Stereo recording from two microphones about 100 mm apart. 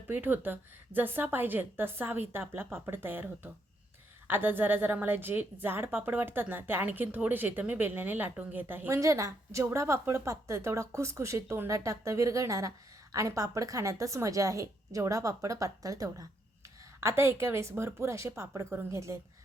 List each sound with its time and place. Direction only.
0.1 s a woman's voice: 20° right (ahead or behind)
8.9 s a woman's voice: 30° right (ahead or behind)